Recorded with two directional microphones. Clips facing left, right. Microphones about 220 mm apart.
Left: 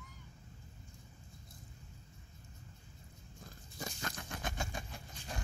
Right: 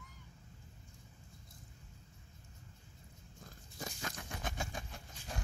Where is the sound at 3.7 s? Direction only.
5° right (ahead or behind).